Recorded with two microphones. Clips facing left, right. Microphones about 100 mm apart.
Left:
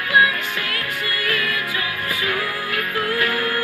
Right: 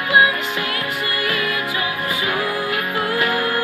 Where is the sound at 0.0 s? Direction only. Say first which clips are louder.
Right 2 dB; 20° right (ahead or behind).